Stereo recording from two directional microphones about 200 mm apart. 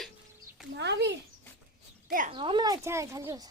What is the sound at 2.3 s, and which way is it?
Speech, 25° right (ahead or behind).